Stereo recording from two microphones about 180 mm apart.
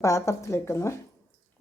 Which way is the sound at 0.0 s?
15° left (ahead or behind).